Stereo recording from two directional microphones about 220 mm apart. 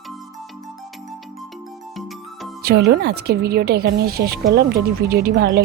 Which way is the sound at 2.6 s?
45° right (ahead or behind).